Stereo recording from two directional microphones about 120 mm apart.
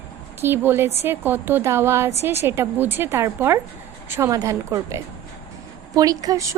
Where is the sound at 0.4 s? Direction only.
20° right (ahead or behind).